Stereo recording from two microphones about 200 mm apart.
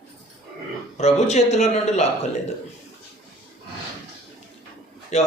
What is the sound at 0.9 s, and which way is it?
Speech, 35° left (ahead or behind).